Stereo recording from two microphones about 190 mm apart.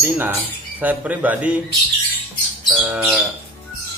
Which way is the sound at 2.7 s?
5° right (ahead or behind).